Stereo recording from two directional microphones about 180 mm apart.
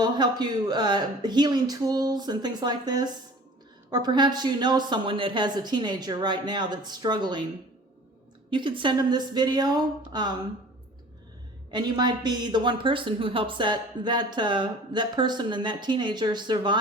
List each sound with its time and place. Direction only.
0.0 s a woman's voice: 25° right (ahead or behind)
8.4 s a woman's voice: 25° right (ahead or behind)
11.7 s a woman's voice: 25° right (ahead or behind)